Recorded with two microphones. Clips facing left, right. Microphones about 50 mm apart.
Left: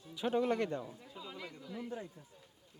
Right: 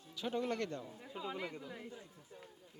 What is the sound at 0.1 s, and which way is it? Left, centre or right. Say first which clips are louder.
Speech: left 5 dB; centre.